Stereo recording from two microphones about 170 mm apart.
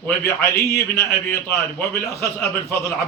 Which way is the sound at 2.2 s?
15° left (ahead or behind).